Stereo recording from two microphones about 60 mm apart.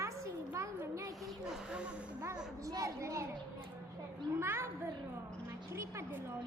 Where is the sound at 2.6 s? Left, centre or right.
Right.